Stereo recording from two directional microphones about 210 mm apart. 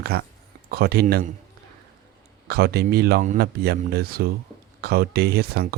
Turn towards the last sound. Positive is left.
turn(degrees=-50)  # may be behind; listen again after turning